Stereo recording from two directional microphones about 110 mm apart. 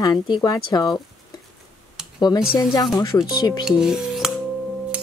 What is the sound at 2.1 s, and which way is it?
Speech, 40° left (ahead or behind).